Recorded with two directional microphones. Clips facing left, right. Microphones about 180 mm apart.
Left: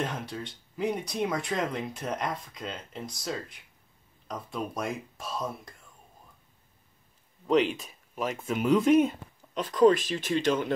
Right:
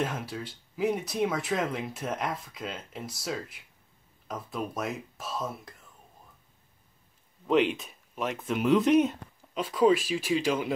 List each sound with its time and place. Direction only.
0.0 s speech: 5° right (ahead or behind)
7.4 s speech: centre (ahead or behind)